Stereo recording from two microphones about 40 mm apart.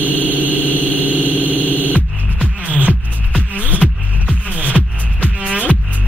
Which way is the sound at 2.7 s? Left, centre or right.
Right.